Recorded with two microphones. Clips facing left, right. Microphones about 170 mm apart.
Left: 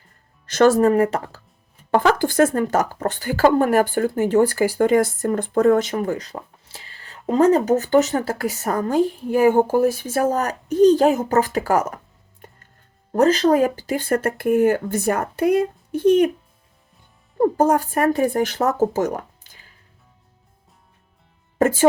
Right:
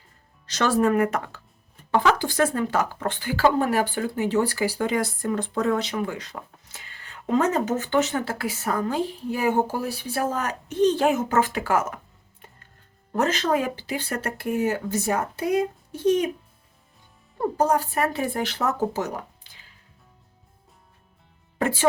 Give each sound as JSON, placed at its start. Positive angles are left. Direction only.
{"t": 0.4, "sound": "speech", "side_deg": 50}
{"t": 1.9, "sound": "speech", "side_deg": 50}
{"t": 13.1, "sound": "speech", "side_deg": 35}
{"t": 17.4, "sound": "speech", "side_deg": 50}
{"t": 21.6, "sound": "speech", "side_deg": 45}